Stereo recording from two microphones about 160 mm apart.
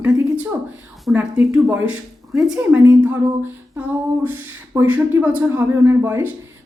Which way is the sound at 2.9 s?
15° right (ahead or behind).